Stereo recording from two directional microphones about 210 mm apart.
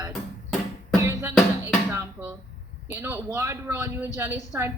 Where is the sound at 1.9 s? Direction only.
10° right (ahead or behind).